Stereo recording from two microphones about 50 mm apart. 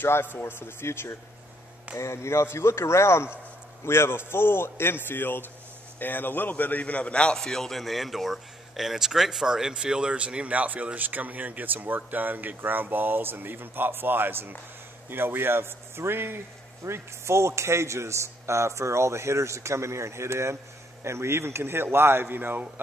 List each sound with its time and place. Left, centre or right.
0.0 s a man's voice: left
2.0 s a man's voice: left
7.3 s a man's voice: centre; by 16.3 s right
16.8 s a man's voice: right